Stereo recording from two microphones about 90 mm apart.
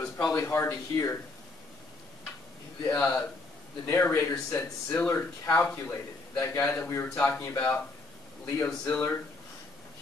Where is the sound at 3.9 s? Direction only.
25° left (ahead or behind).